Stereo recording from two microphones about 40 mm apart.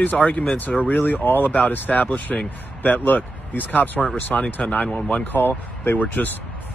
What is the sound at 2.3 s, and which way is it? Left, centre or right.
Speech, centre.